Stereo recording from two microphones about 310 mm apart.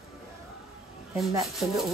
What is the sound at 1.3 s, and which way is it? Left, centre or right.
Speech, centre.